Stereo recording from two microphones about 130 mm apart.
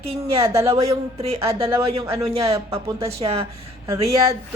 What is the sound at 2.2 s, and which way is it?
Speech, 50° right (ahead or behind).